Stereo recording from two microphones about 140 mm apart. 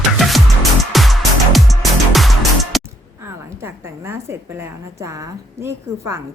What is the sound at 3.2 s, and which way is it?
A woman's voice, 15° right (ahead or behind).